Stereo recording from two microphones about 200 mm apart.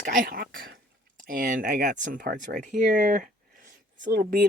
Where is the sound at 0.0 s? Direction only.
45° right (ahead or behind).